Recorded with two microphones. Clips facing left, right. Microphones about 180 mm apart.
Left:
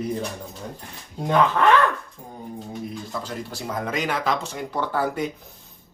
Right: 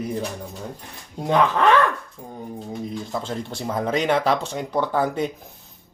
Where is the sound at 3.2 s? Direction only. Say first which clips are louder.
Right 3 dB; 25° right (ahead or behind).